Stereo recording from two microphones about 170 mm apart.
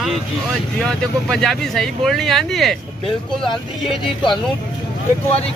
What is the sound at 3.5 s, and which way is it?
Speech, 30° left (ahead or behind).